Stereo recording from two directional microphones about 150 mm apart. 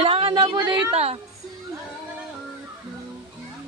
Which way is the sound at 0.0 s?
35° right (ahead or behind).